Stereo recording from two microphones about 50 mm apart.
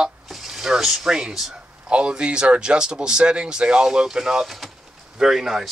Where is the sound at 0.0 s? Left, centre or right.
Centre.